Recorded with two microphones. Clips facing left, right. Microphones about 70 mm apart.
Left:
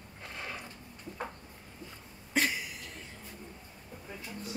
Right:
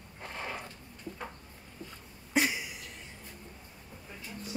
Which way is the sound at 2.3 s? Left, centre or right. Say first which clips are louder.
Right 1 dB; centre.